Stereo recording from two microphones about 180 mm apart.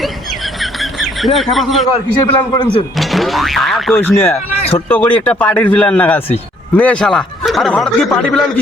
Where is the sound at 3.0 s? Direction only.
Centre (ahead or behind).